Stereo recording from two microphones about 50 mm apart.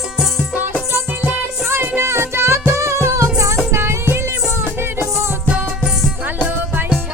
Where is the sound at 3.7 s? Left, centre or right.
Right.